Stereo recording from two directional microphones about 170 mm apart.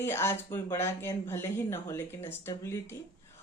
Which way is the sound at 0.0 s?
15° left (ahead or behind).